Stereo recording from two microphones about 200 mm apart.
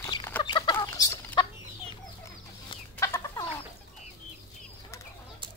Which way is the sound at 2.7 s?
15° left (ahead or behind).